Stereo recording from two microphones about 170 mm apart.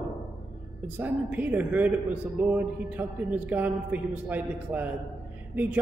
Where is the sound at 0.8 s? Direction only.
10° right (ahead or behind).